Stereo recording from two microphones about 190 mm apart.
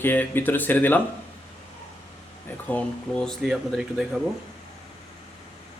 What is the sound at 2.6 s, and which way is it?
Speech, 5° left (ahead or behind).